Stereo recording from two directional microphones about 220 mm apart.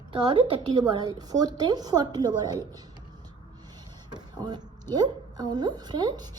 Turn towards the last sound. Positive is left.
turn(degrees=-20)  # may be behind; listen again after turning